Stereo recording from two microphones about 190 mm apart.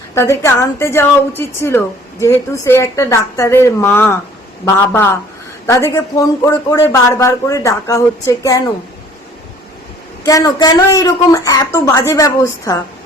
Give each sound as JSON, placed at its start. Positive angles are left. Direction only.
{"t": 0.1, "sound": "a man's voice", "side_deg": 15}
{"t": 10.2, "sound": "a man's voice", "side_deg": 20}